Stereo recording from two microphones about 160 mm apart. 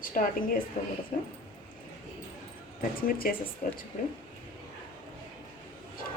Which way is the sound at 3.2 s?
65° left (ahead or behind).